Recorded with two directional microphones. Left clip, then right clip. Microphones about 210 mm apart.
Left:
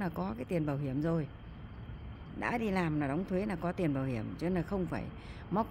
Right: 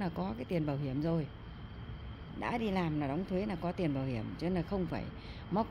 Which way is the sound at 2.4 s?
15° left (ahead or behind).